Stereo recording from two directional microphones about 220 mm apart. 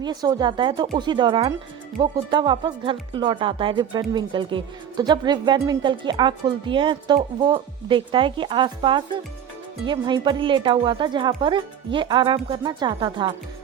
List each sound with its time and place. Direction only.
0.0 s a woman's voice: 20° right (ahead or behind)